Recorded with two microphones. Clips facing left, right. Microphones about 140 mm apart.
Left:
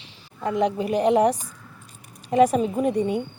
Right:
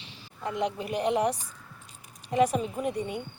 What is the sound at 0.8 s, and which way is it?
Speech, 35° left (ahead or behind).